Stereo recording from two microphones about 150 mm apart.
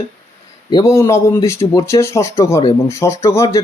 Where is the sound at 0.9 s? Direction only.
20° left (ahead or behind).